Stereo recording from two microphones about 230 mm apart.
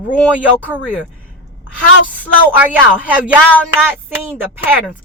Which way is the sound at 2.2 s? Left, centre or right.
Centre.